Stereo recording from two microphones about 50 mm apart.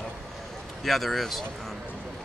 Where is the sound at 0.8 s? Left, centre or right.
Centre.